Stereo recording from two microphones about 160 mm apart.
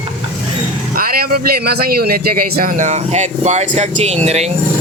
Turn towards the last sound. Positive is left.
turn(degrees=-40)  # may be behind; listen again after turning